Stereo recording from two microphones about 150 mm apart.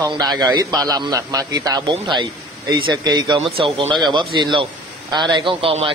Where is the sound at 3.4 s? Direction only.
40° right (ahead or behind).